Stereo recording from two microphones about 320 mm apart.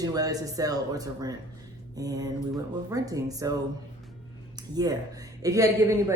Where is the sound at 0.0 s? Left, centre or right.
Centre.